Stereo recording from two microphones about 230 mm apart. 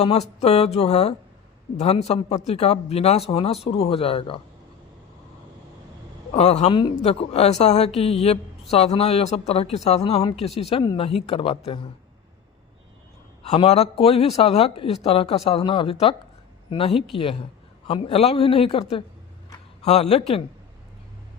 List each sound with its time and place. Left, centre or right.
0.0 s speech: left
6.3 s speech: left
13.5 s speech: left